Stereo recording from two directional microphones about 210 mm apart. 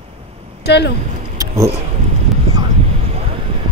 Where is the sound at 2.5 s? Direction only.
25° right (ahead or behind).